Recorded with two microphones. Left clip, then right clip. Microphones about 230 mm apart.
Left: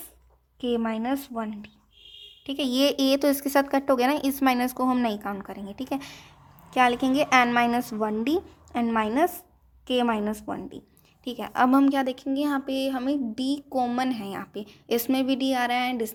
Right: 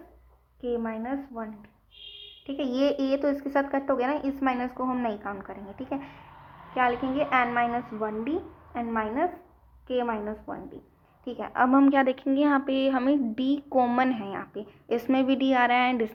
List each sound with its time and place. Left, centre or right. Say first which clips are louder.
0.6 s a woman's voice: left 3 dB; left
2.6 s speech: left 3 dB; left
6.7 s a woman's voice: left 4 dB; left
11.3 s a woman's voice: left 1 dB; left